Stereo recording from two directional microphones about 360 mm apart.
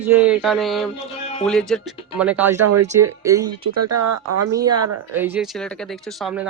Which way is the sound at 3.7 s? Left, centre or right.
Right.